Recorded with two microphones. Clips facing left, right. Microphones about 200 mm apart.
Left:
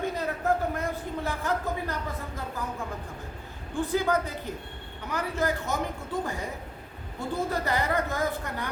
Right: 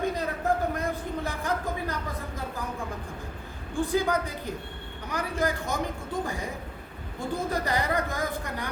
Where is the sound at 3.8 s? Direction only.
15° right (ahead or behind).